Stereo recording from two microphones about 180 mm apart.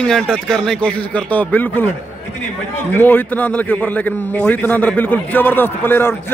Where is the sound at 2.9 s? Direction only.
10° left (ahead or behind).